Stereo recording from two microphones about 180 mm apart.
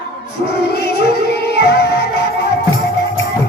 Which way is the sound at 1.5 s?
65° left (ahead or behind).